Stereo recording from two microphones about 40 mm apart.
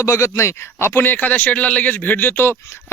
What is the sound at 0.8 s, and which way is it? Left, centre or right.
Speech, left.